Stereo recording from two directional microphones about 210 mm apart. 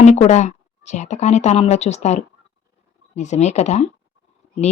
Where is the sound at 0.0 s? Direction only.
35° left (ahead or behind).